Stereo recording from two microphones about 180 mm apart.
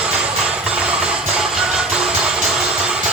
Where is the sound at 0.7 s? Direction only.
5° right (ahead or behind).